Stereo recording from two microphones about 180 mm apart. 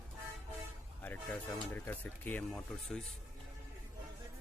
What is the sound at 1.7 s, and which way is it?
Speech, 10° left (ahead or behind).